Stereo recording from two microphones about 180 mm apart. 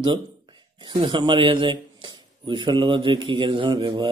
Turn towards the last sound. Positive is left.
turn(degrees=-25)  # may be behind; listen again after turning